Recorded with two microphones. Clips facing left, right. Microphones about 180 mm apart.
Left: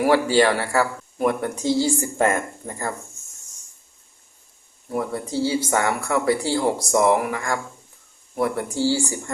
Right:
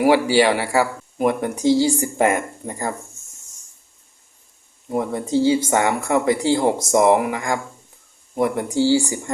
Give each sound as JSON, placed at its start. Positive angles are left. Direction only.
{"t": 0.0, "sound": "speech", "side_deg": -15}
{"t": 4.9, "sound": "speech", "side_deg": -20}